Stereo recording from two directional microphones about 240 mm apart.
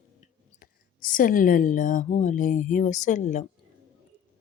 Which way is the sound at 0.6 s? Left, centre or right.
Left.